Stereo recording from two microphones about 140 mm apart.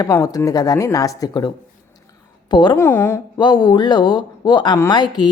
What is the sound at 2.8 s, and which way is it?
Speech, 20° left (ahead or behind).